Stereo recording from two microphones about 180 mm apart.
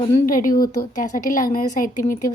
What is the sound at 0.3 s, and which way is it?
Speech, 50° left (ahead or behind).